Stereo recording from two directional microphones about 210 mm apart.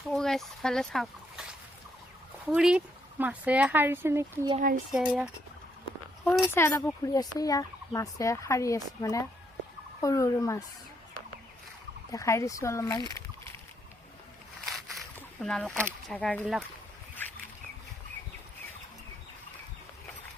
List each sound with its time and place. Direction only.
0.1 s speech: centre (ahead or behind)
6.5 s speech: 10° left (ahead or behind)
12.1 s speech: 15° left (ahead or behind)
14.7 s speech: centre (ahead or behind)